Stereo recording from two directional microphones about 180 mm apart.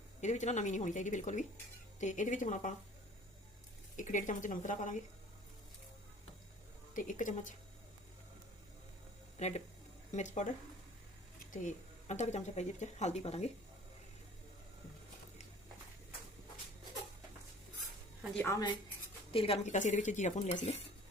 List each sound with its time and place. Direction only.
0.2 s speech: 40° left (ahead or behind)
3.9 s speech: 45° left (ahead or behind)
6.9 s speech: 45° left (ahead or behind)
9.4 s speech: 35° left (ahead or behind)
11.5 s speech: 40° left (ahead or behind)
18.3 s a woman's voice: 15° left (ahead or behind)
19.3 s speech: 30° left (ahead or behind)